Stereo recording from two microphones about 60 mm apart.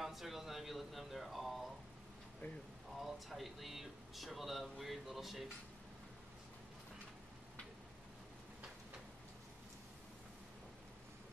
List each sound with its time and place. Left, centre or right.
0.0 s speech: centre
2.4 s speech: left
3.0 s speech: centre